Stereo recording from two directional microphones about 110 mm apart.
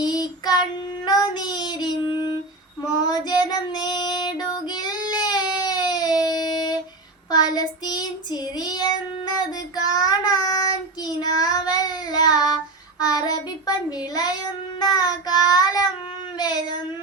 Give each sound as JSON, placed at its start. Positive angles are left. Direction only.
{"t": 0.0, "sound": "child singing", "side_deg": 40}
{"t": 3.1, "sound": "child singing", "side_deg": 40}